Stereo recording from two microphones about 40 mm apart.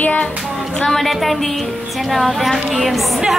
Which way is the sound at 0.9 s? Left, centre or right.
Centre.